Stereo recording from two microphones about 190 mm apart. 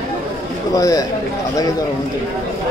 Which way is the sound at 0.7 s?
20° left (ahead or behind).